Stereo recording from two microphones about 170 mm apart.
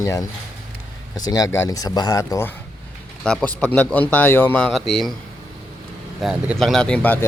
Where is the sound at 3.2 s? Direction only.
5° left (ahead or behind).